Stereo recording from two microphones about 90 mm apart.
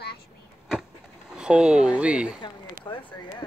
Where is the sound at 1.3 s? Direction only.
10° right (ahead or behind).